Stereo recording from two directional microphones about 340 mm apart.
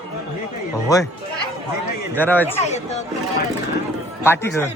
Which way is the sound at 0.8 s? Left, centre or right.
Centre.